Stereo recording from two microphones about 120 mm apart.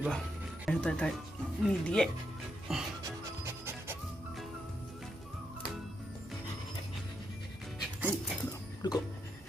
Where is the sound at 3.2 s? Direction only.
25° right (ahead or behind).